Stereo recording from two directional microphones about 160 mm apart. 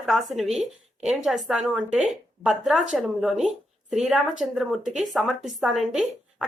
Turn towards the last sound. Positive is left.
turn(degrees=0)  # may be behind; listen again after turning